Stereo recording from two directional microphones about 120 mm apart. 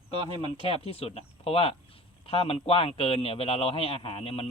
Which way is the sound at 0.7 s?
55° left (ahead or behind).